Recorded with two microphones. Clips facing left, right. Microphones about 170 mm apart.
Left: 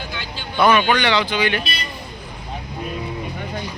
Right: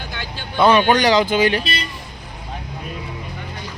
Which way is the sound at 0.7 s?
35° right (ahead or behind).